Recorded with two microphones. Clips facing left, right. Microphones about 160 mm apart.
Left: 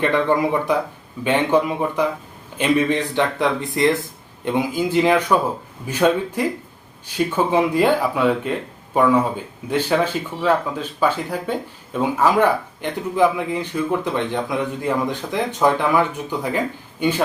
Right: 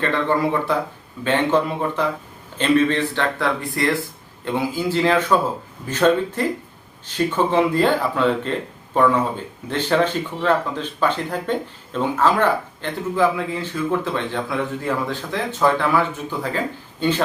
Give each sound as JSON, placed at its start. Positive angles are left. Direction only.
{"t": 0.0, "sound": "speech", "side_deg": 15}